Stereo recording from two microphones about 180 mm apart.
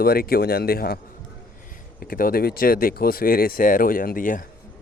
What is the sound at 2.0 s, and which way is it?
Speech, 55° left (ahead or behind).